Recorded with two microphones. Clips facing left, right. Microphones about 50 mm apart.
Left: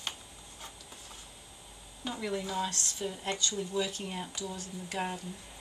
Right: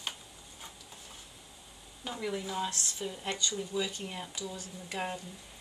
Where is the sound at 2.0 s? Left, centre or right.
Centre.